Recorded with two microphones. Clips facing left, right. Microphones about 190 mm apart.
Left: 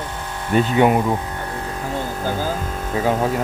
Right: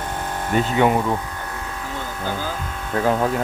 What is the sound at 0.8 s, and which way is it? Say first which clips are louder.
Speech: left 2 dB; 15° left (ahead or behind).